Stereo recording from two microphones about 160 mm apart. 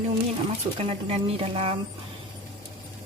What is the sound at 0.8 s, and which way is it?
Speech, 35° right (ahead or behind).